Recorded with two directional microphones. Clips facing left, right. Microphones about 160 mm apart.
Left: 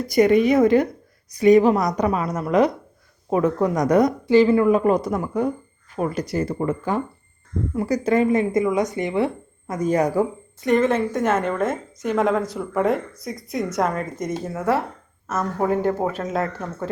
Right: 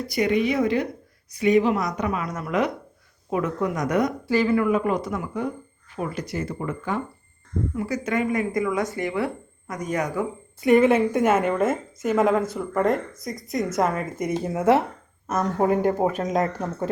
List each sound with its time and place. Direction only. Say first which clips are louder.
0.1 s a woman's voice: left 7 dB; 45° left (ahead or behind)
4.3 s a woman's voice: left 6 dB; 25° left (ahead or behind)
10.8 s a woman's voice: right 2 dB; 15° right (ahead or behind)